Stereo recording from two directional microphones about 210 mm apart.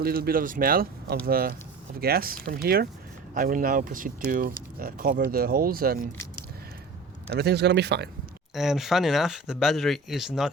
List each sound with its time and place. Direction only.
0.0 s speech: 45° right (ahead or behind)
7.3 s speech: 50° right (ahead or behind)
8.5 s speech: centre (ahead or behind)